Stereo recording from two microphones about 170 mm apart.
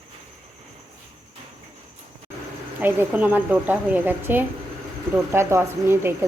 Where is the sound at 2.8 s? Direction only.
10° right (ahead or behind).